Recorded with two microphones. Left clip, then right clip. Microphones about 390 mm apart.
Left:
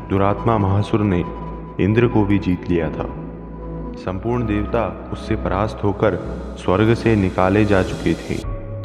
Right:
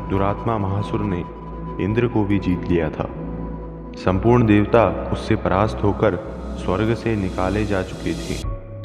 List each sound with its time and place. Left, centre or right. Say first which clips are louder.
0.1 s a man's voice: left 4 dB; left
0.6 s speech: left 5 dB; left
1.8 s a man's voice: left 4 dB; left
2.2 s speech: left 2 dB; centre
4.0 s speech: right 6 dB; right
5.1 s a man's voice: right 2 dB; right
5.8 s a man's voice: even; centre
6.6 s speech: left 5 dB; left